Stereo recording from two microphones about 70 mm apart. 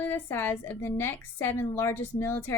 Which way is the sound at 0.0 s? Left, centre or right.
Left.